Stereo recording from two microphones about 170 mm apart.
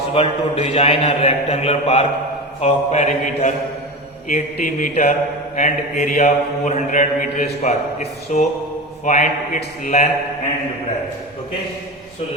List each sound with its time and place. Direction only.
0.1 s a man's voice: 35° left (ahead or behind)
2.6 s mantra: 40° left (ahead or behind)
4.3 s a man's voice: 45° left (ahead or behind)
5.5 s mantra: 45° left (ahead or behind)
9.8 s a man's voice: 40° left (ahead or behind)